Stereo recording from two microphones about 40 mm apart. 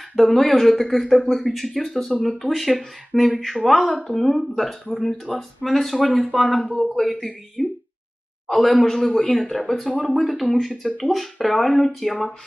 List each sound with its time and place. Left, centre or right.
0.2 s speech: centre
9.9 s speech: left
10.2 s speech: centre